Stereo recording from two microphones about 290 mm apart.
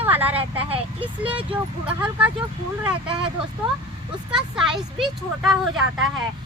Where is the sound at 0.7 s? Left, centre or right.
Centre.